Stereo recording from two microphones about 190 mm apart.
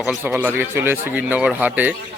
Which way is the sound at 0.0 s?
5° right (ahead or behind).